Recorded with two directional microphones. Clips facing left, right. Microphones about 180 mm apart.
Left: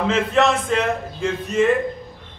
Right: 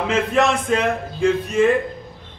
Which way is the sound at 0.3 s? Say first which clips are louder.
Right 1 dB; 15° right (ahead or behind).